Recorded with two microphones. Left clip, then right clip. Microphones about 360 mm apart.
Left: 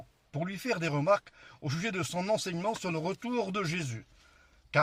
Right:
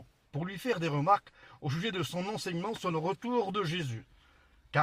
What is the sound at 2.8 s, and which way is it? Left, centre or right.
Speech, centre.